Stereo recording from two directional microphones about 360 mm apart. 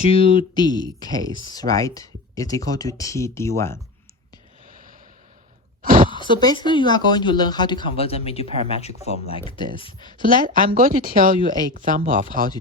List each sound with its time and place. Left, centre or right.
0.1 s speech: centre
5.8 s speech: right
6.2 s speech: centre
10.2 s speech: right